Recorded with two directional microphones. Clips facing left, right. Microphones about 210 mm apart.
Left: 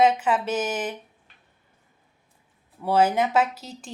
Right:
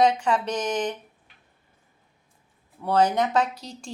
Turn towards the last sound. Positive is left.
turn(degrees=5)  # may be behind; listen again after turning